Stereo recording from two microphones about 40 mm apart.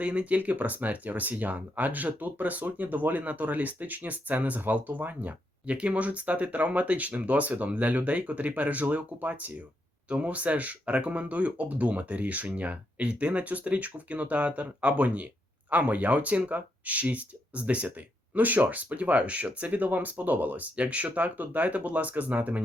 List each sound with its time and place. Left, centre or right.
0.0 s speech: right
5.7 s speech: right